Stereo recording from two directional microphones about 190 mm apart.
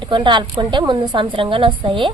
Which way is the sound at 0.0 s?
25° right (ahead or behind).